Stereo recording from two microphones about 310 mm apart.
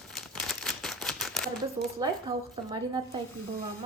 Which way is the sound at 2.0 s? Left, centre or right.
Centre.